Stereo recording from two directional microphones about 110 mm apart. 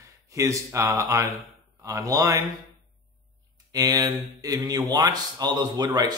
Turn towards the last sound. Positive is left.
turn(degrees=-40)  # may be behind; listen again after turning